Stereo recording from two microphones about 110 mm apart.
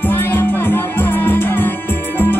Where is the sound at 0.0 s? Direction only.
20° left (ahead or behind).